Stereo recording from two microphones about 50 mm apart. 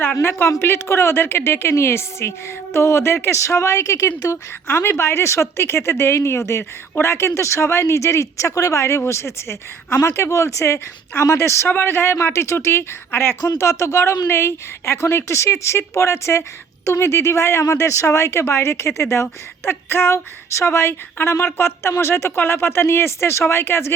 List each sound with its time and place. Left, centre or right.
0.2 s speech: left
4.7 s speech: left
11.2 s speech: left
11.7 s speech: left
13.1 s speech: left